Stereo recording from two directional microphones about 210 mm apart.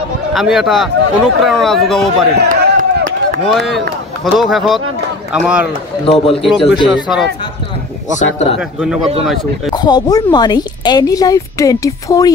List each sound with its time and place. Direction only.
0.3 s speech: centre (ahead or behind)
2.3 s chop: 50° right (ahead or behind)
3.4 s speech: centre (ahead or behind)
6.0 s a man's voice: 25° left (ahead or behind)
6.9 s speech: centre (ahead or behind)
8.2 s speech: 30° left (ahead or behind)
8.5 s speech: 5° right (ahead or behind)
9.7 s speech: 20° left (ahead or behind)